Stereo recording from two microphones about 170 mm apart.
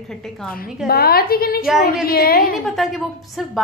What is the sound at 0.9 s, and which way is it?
A woman's voice, 65° left (ahead or behind).